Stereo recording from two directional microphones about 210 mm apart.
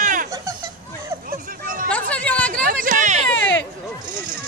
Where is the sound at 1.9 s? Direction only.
5° left (ahead or behind).